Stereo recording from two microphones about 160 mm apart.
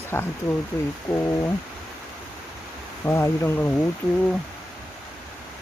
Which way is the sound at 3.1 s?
15° left (ahead or behind).